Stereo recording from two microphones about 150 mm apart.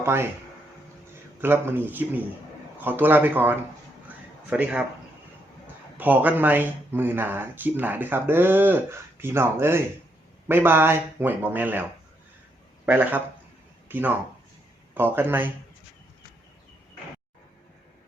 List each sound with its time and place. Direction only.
0.0 s speech: 15° right (ahead or behind)
1.4 s speech: 15° right (ahead or behind)
6.0 s speech: 10° right (ahead or behind)